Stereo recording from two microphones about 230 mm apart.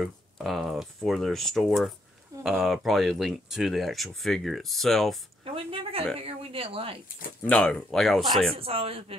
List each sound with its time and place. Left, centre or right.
0.0 s speech: centre
5.4 s speech: right
7.4 s speech: centre
8.5 s speech: right